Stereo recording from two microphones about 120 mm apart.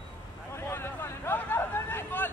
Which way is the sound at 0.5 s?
20° left (ahead or behind).